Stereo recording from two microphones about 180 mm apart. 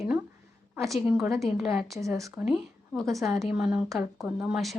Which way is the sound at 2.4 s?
Centre (ahead or behind).